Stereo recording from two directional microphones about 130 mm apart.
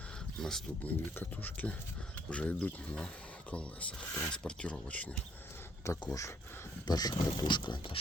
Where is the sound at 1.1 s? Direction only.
15° left (ahead or behind).